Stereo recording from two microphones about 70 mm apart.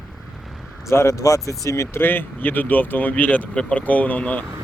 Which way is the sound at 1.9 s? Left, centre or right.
Left.